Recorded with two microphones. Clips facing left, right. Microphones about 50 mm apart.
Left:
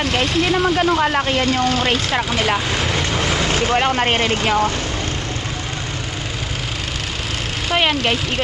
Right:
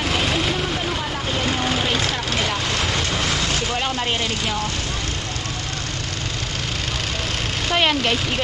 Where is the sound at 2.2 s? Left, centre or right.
Centre.